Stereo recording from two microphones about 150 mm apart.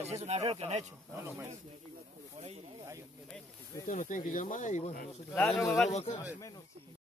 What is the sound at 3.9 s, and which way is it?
Speech, 60° left (ahead or behind).